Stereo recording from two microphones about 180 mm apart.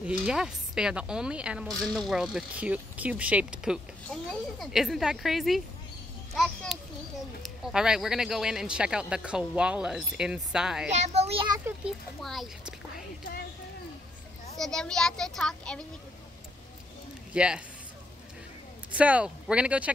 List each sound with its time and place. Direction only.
0.0 s a woman's voice: 5° right (ahead or behind)
6.3 s children playing: centre (ahead or behind)
7.4 s a woman's voice: 5° right (ahead or behind)
10.9 s a child's voice: 35° right (ahead or behind)
11.6 s a woman's voice: centre (ahead or behind)
14.6 s a woman's voice: 5° left (ahead or behind)
17.3 s speech: 5° right (ahead or behind)
18.9 s speech: 10° right (ahead or behind)